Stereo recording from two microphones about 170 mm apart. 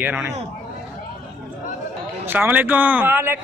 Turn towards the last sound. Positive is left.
turn(degrees=-15)  # may be behind; listen again after turning